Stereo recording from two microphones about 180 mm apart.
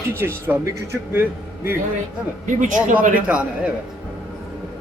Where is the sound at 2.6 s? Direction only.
45° right (ahead or behind).